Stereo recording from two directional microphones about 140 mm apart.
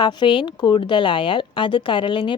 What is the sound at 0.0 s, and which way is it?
Speech, 30° left (ahead or behind).